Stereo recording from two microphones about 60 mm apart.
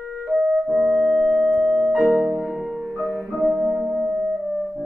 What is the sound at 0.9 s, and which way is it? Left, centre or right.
Music, centre.